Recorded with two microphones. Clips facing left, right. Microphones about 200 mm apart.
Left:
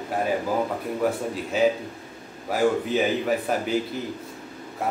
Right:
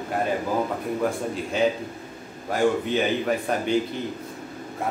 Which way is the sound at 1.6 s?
5° left (ahead or behind).